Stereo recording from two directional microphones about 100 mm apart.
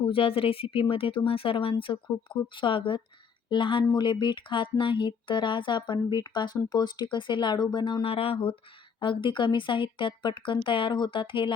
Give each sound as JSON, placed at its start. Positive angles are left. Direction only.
{"t": 0.1, "sound": "a woman's voice", "side_deg": 65}
{"t": 8.0, "sound": "speech", "side_deg": 70}
{"t": 9.0, "sound": "speech", "side_deg": 55}